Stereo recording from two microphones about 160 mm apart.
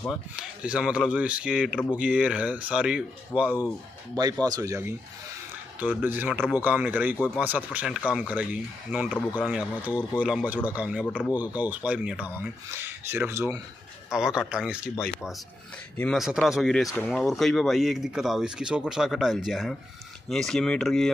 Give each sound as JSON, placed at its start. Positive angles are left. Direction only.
{"t": 0.4, "sound": "speech", "side_deg": -5}
{"t": 4.2, "sound": "speech", "side_deg": -25}
{"t": 11.0, "sound": "speech", "side_deg": 5}
{"t": 11.3, "sound": "speech", "side_deg": -10}
{"t": 14.1, "sound": "speech", "side_deg": -5}